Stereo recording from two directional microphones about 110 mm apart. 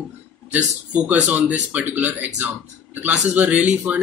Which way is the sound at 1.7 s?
15° right (ahead or behind).